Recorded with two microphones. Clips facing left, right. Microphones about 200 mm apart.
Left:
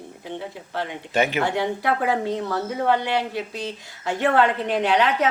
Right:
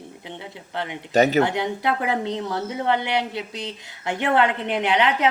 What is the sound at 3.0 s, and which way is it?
A woman's voice, 20° right (ahead or behind).